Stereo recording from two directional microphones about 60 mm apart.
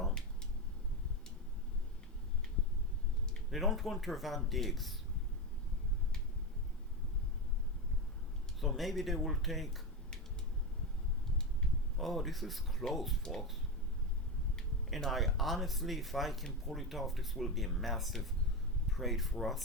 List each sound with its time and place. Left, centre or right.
3.5 s speech: centre
8.6 s speech: centre
11.9 s speech: centre
14.8 s speech: centre